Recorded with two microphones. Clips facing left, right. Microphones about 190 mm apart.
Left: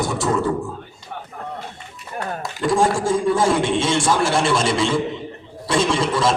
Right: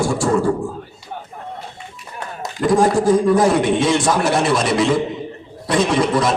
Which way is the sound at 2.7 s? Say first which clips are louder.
Right 5 dB; 25° left (ahead or behind).